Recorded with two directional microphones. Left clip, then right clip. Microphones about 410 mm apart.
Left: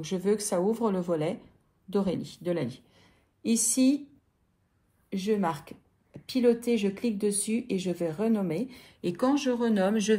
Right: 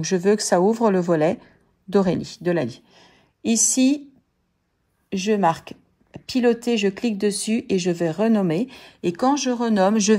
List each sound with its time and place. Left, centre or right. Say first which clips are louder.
0.0 s speech: right 9 dB; centre
5.1 s speech: right 9 dB; right